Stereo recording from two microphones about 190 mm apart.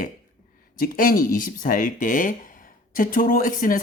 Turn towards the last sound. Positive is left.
turn(degrees=45)  # may be behind; listen again after turning